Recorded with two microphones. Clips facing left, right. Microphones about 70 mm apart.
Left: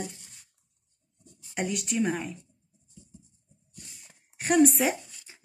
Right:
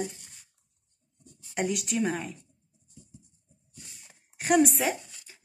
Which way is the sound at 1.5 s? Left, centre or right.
Centre.